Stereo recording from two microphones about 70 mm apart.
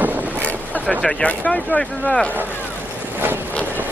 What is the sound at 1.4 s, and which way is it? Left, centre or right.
Speech, centre.